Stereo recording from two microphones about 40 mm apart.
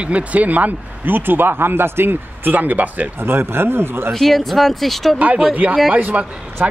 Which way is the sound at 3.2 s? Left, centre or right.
Right.